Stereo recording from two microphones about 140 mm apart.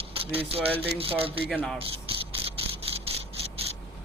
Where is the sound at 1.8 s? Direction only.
40° right (ahead or behind).